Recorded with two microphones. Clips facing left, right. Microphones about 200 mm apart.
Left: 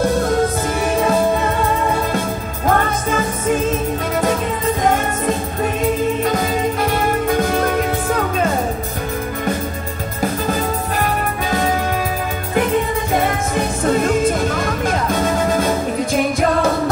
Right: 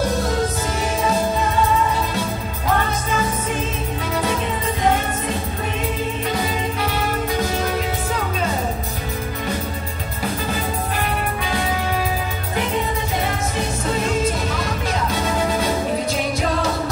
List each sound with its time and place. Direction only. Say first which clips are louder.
0.8 s music: left 5 dB; 55° left (ahead or behind)
4.8 s music: left 2 dB; 50° left (ahead or behind)
13.1 s music: left 5 dB; 50° left (ahead or behind)